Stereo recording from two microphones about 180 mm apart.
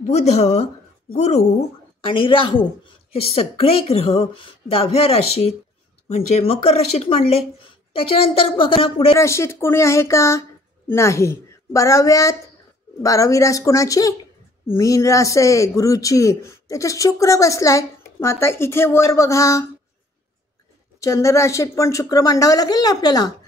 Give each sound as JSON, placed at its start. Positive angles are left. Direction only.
{"t": 0.0, "sound": "a woman's voice", "side_deg": 40}
{"t": 9.2, "sound": "speech", "side_deg": 15}
{"t": 21.0, "sound": "speech", "side_deg": 15}